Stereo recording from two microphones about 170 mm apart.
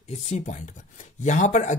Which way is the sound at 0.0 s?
40° left (ahead or behind).